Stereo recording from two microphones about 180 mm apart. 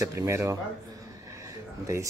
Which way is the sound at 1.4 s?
15° right (ahead or behind).